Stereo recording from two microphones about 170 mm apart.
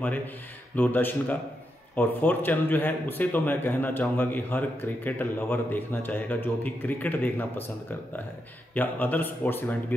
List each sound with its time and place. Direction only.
0.7 s a man's voice: 10° left (ahead or behind)
8.7 s a man's voice: 10° left (ahead or behind)